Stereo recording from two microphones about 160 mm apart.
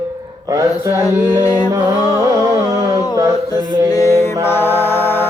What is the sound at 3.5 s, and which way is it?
Music, 25° left (ahead or behind).